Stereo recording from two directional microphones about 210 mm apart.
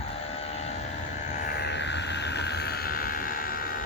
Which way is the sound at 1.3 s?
50° left (ahead or behind).